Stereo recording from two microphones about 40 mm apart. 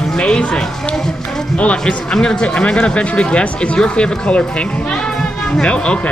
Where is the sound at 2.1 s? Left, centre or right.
Centre.